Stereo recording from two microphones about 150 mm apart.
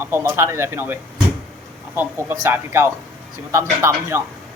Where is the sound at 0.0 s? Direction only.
15° right (ahead or behind).